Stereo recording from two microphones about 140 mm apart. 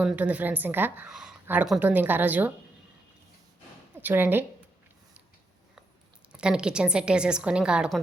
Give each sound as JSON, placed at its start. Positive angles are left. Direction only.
{"t": 0.0, "sound": "a woman's voice", "side_deg": -10}
{"t": 4.0, "sound": "a woman's voice", "side_deg": -15}
{"t": 6.3, "sound": "a woman's voice", "side_deg": -5}